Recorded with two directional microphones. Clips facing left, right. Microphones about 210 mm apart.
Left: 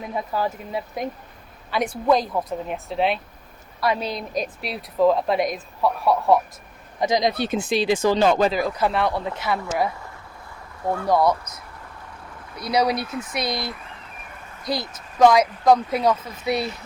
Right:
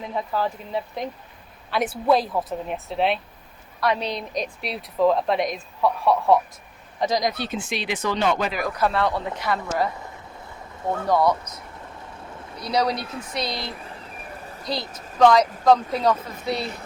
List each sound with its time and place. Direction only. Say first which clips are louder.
0.1 s speech: even; 10° left (ahead or behind)
1.7 s speech: even; 5° right (ahead or behind)
7.1 s speech: left 3 dB; 25° left (ahead or behind)
7.3 s speech: left 5 dB; 50° left (ahead or behind)
7.7 s speech: left 9 dB; 30° left (ahead or behind)
8.8 s speech: right 3 dB; 15° left (ahead or behind)
11.1 s speech: left 1 dB; 10° left (ahead or behind)
12.5 s speech: left 2 dB; 10° left (ahead or behind)
14.7 s speech: left 2 dB; 10° left (ahead or behind)